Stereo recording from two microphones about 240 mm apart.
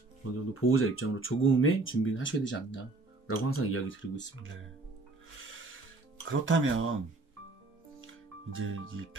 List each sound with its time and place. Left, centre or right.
0.5 s speech: left
3.3 s speech: left
6.2 s speech: right
8.0 s music: right